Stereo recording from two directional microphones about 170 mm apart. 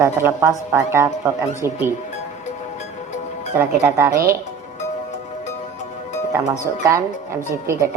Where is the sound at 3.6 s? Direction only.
10° right (ahead or behind).